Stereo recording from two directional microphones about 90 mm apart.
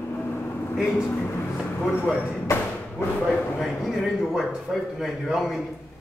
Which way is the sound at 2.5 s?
30° left (ahead or behind).